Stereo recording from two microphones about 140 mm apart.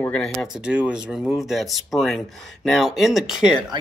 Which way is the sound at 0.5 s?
5° right (ahead or behind).